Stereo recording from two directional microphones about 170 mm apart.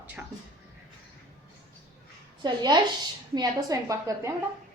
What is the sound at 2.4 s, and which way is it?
A woman's voice, 25° right (ahead or behind).